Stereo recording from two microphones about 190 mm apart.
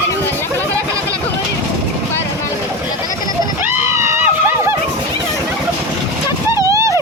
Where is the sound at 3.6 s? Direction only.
15° right (ahead or behind).